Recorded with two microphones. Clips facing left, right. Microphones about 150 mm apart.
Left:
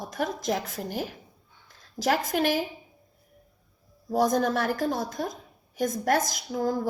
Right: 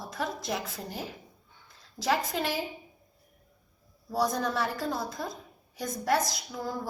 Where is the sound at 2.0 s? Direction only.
90° left.